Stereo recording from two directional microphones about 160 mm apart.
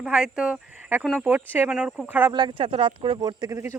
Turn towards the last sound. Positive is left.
turn(degrees=-20)  # may be behind; listen again after turning